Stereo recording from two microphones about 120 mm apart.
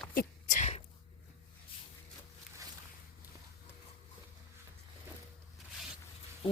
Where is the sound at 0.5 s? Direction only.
70° left (ahead or behind).